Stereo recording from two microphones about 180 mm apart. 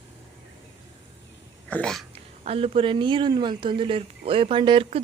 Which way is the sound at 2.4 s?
35° right (ahead or behind).